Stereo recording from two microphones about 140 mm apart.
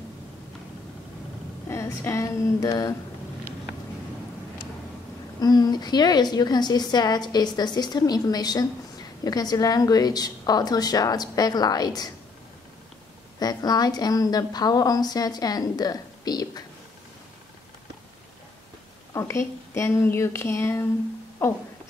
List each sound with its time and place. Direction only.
1.7 s a woman's voice: 20° left (ahead or behind)
5.4 s a woman's voice: 30° left (ahead or behind)
13.4 s a woman's voice: 30° left (ahead or behind)
19.1 s a woman's voice: 20° left (ahead or behind)